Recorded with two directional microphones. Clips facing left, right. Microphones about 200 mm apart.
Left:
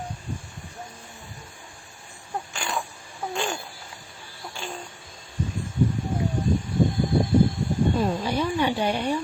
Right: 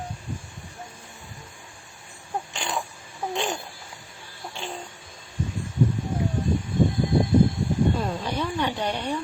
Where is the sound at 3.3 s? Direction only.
20° right (ahead or behind).